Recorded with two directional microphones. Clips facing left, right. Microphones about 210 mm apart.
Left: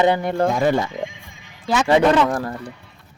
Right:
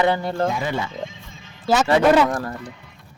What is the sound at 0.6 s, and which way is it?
Speech, 45° left (ahead or behind).